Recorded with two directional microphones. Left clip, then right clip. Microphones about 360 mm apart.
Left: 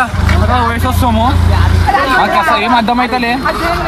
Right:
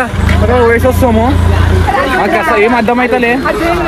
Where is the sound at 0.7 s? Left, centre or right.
Centre.